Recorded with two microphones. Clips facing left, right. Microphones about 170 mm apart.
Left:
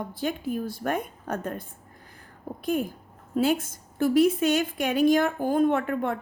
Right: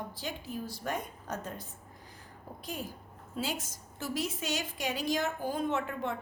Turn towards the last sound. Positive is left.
turn(degrees=55)  # may be behind; listen again after turning